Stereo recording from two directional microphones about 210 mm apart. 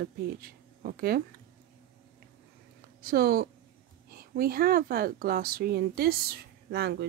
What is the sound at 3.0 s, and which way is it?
Speech, 45° right (ahead or behind).